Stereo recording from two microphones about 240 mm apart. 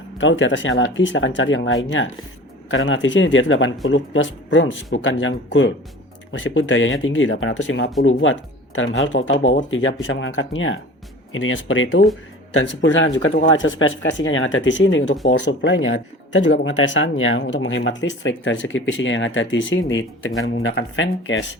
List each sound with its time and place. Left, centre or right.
0.2 s speech: left